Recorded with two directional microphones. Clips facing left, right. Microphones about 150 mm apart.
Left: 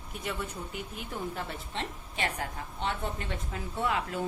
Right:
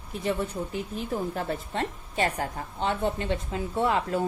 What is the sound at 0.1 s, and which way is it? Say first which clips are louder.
Speech: right 8 dB; 35° right (ahead or behind).